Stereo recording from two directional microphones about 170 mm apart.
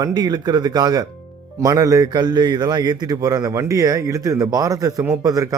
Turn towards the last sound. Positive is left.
turn(degrees=-20)  # may be behind; listen again after turning